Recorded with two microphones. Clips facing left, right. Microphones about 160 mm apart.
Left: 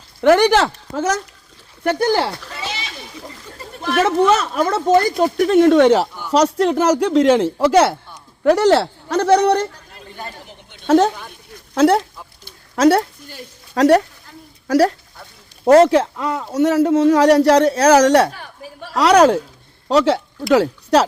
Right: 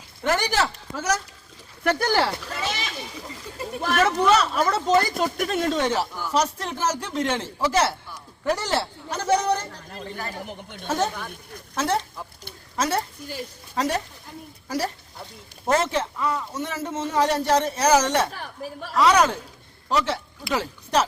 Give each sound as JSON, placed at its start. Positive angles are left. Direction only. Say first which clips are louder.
{"t": 0.2, "sound": "speech", "louder": "left 11 dB", "side_deg": 70}
{"t": 1.9, "sound": "speech", "louder": "left 5 dB", "side_deg": 10}
{"t": 2.6, "sound": "a sound", "louder": "even", "side_deg": -50}
{"t": 3.9, "sound": "speech", "louder": "left 5 dB", "side_deg": 45}
{"t": 10.4, "sound": "a woman's voice", "louder": "right 5 dB", "side_deg": -55}
{"t": 10.8, "sound": "speech", "louder": "left 11 dB", "side_deg": 70}
{"t": 15.8, "sound": "speech", "louder": "left 11 dB", "side_deg": 85}